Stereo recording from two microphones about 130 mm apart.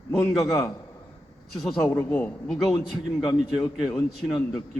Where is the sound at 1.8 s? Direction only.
15° left (ahead or behind).